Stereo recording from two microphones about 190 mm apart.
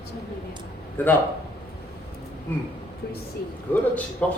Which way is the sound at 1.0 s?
10° left (ahead or behind).